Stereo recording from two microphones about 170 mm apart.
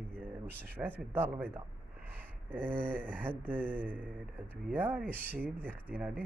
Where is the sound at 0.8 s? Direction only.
10° right (ahead or behind).